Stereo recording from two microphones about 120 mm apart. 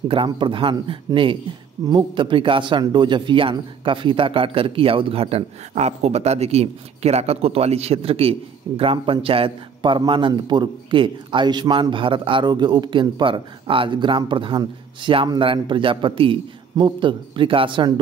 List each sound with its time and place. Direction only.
0.1 s speech: 45° right (ahead or behind)